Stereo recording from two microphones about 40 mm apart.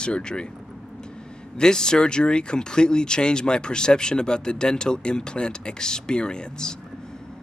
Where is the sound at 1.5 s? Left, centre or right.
Centre.